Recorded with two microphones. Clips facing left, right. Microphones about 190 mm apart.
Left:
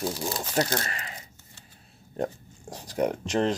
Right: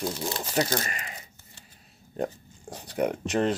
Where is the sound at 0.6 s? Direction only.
10° right (ahead or behind).